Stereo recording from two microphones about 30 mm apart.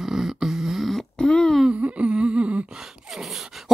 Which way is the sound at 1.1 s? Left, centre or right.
Left.